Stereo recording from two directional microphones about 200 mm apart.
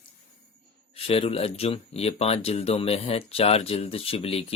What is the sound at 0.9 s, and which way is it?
Speech, 30° left (ahead or behind).